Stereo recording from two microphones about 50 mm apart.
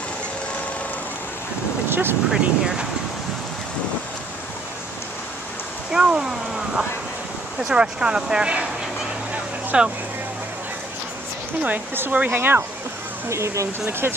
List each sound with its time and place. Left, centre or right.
1.9 s a sound: right
2.3 s speech: centre
5.9 s speech: centre
7.6 s speech: centre
9.7 s speech: right
12.1 s speech: right
12.4 s speech: right
13.3 s speech: right
13.8 s speech: right